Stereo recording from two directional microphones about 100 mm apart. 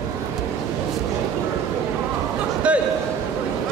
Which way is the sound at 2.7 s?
10° right (ahead or behind).